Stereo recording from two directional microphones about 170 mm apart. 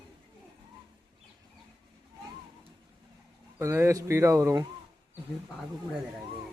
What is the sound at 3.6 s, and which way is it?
Speech, 15° right (ahead or behind).